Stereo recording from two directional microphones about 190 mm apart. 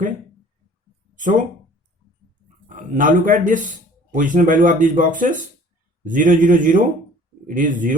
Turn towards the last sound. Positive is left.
turn(degrees=-45)  # may be behind; listen again after turning